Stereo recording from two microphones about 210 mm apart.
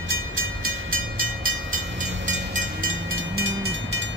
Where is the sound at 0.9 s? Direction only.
75° right (ahead or behind).